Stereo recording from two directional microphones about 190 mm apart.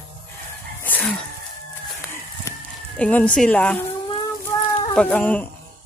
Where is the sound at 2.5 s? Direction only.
15° left (ahead or behind).